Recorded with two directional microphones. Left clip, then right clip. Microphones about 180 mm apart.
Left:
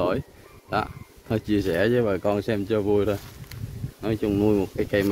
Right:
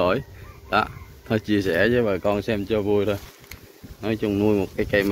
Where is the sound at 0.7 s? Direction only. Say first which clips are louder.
Right 5 dB; 10° left (ahead or behind).